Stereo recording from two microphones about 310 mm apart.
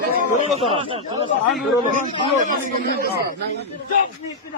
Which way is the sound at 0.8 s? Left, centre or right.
Centre.